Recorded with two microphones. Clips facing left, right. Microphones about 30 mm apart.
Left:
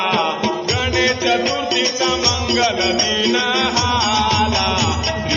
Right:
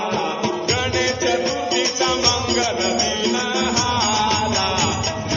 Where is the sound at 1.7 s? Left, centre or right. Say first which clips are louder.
Left 1 dB; centre.